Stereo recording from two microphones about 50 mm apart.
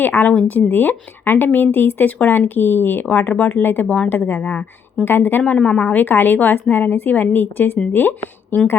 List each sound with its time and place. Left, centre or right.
0.0 s a woman's voice: left
3.1 s a woman's voice: left
3.8 s a woman's voice: left
4.1 s a woman's voice: left
5.6 s a woman's voice: left